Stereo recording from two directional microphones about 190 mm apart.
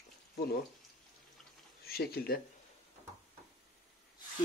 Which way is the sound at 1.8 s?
55° left (ahead or behind).